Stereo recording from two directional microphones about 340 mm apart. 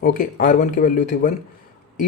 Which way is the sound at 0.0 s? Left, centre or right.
Left.